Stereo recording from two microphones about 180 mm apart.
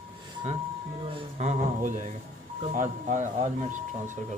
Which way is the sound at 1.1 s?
40° right (ahead or behind).